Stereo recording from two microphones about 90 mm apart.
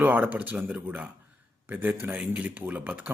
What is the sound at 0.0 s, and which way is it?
A man's voice, 20° right (ahead or behind).